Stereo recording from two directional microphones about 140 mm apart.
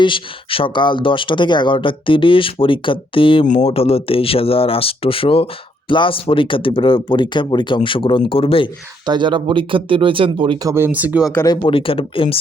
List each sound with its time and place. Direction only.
0.0 s speech: 40° left (ahead or behind)
3.4 s speech: 60° left (ahead or behind)
3.7 s speech: 45° left (ahead or behind)
9.0 s speech: 35° right (ahead or behind)
10.7 s speech: 15° right (ahead or behind)
11.4 s speech: 30° left (ahead or behind)